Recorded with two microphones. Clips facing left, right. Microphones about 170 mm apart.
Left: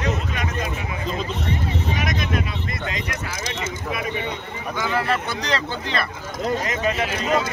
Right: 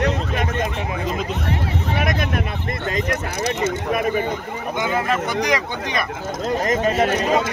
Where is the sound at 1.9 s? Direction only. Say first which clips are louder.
Right 5 dB; 60° right (ahead or behind).